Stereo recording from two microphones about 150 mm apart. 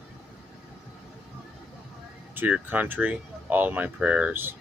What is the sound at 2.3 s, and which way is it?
Speech, 10° right (ahead or behind).